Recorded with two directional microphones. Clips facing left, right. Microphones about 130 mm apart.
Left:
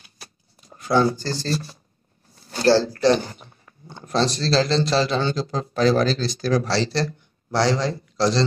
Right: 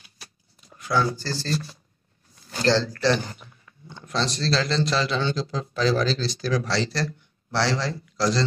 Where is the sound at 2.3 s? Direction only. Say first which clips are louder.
Left 5 dB; 40° left (ahead or behind).